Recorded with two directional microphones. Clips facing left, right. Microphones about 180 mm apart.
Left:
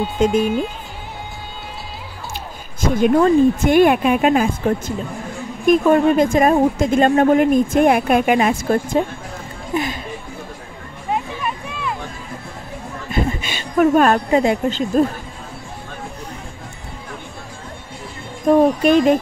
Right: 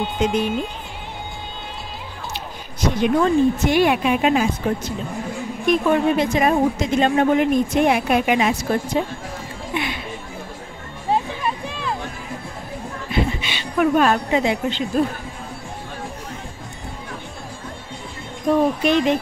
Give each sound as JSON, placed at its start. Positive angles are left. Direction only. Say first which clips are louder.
{"t": 0.2, "sound": "a woman's voice", "louder": "left 5 dB", "side_deg": 50}
{"t": 2.9, "sound": "a woman's voice", "louder": "left 4 dB", "side_deg": 50}
{"t": 5.7, "sound": "a woman's voice", "louder": "left 4 dB", "side_deg": 45}
{"t": 11.1, "sound": "music", "louder": "right 2 dB", "side_deg": -30}
{"t": 13.1, "sound": "speech", "louder": "left 1 dB", "side_deg": 45}
{"t": 18.5, "sound": "a woman's voice", "louder": "left 4 dB", "side_deg": 45}